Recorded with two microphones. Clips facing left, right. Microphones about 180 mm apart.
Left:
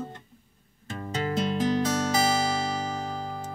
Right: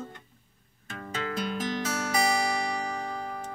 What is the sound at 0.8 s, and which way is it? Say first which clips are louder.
Music: left 4 dB; 30° left (ahead or behind).